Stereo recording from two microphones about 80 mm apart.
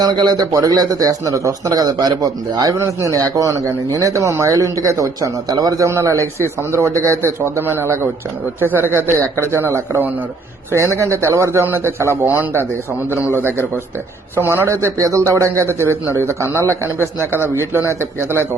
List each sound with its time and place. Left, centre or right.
0.0 s speech: right
2.8 s speech: right
5.9 s a man's voice: right